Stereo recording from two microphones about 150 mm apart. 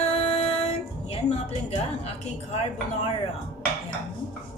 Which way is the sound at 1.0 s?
45° left (ahead or behind).